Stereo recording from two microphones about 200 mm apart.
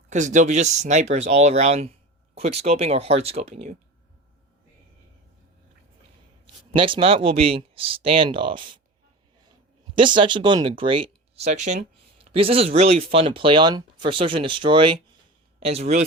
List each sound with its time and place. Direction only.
0.1 s speech: 35° right (ahead or behind)
6.7 s speech: 25° right (ahead or behind)
10.0 s speech: 25° right (ahead or behind)